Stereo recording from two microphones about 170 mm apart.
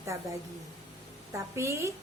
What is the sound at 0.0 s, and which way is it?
A woman's voice, 20° right (ahead or behind).